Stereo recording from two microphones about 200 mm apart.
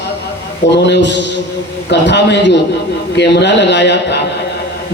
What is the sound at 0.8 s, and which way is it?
A man's voice, 60° left (ahead or behind).